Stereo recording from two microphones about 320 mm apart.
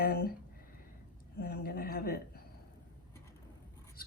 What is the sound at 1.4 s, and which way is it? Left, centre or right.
Speech, left.